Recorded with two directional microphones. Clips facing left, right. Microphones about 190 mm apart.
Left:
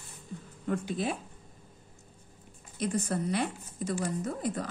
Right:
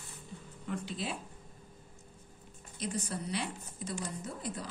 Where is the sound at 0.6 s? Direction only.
50° left (ahead or behind).